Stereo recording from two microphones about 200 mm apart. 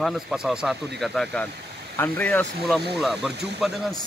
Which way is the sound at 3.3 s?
55° right (ahead or behind).